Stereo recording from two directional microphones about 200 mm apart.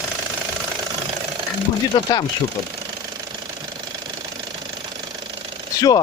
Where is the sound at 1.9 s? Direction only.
20° left (ahead or behind).